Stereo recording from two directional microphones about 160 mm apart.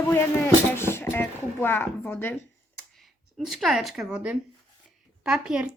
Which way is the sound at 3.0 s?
Centre (ahead or behind).